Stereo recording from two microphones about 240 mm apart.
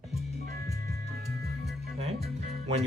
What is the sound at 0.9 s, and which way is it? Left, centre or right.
Music, right.